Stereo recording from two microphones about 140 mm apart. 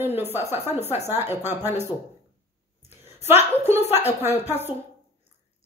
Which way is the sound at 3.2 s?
15° right (ahead or behind).